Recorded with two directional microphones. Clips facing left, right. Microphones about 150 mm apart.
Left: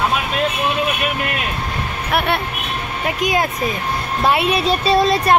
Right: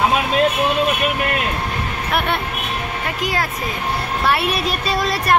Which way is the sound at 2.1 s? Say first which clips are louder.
Left 2 dB; 5° left (ahead or behind).